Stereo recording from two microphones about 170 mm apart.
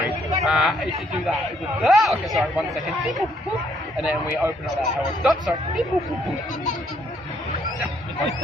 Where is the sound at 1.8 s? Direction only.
Centre (ahead or behind).